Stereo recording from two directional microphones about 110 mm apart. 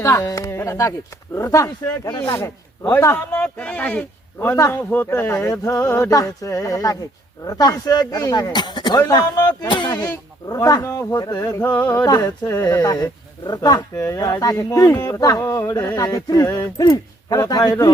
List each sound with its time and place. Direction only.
0.0 s speech: 30° left (ahead or behind)
2.3 s speech: 20° left (ahead or behind)
3.3 s speech: 10° left (ahead or behind)
4.4 s speech: 25° left (ahead or behind)
11.6 s speech: 15° left (ahead or behind)
12.0 s speech: 35° left (ahead or behind)